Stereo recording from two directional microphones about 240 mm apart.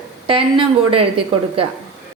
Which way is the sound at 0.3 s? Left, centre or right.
Right.